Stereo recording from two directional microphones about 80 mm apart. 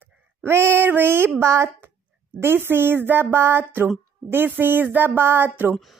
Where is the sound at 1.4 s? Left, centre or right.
Right.